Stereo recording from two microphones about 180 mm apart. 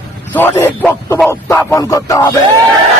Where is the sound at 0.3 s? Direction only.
10° left (ahead or behind).